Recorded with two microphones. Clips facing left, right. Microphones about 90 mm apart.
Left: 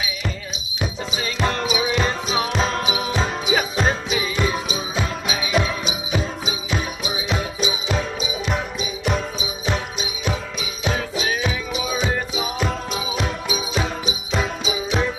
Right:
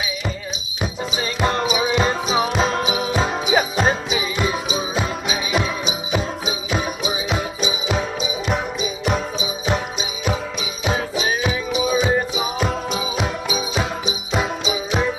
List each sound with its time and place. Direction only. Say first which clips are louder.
0.7 s music: right 2 dB; 5° right (ahead or behind)
12.9 s jingle bell: right 2 dB; centre (ahead or behind)